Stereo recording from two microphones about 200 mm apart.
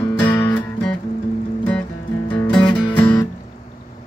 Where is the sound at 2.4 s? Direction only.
5° left (ahead or behind).